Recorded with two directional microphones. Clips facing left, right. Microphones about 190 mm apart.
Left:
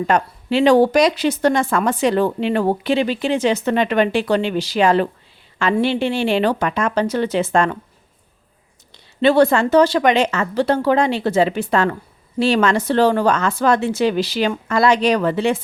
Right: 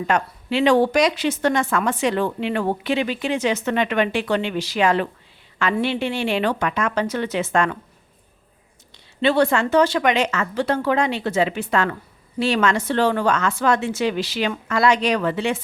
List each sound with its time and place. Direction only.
0.1 s speech: 35° left (ahead or behind)
9.2 s speech: 40° left (ahead or behind)